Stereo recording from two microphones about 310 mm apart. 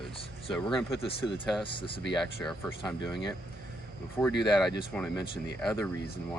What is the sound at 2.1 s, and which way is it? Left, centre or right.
Speech, centre.